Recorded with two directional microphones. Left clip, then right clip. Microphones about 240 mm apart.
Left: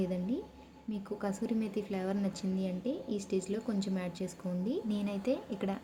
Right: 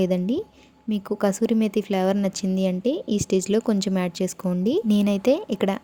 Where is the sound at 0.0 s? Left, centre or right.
Right.